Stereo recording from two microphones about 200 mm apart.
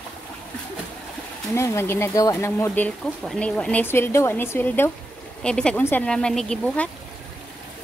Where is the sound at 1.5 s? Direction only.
15° left (ahead or behind).